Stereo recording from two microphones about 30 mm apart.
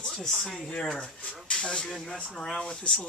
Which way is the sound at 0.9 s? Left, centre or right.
Left.